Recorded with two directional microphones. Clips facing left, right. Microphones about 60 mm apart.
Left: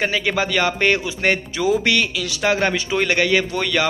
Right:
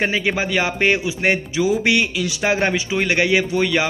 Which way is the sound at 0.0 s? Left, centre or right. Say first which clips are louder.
Even; right.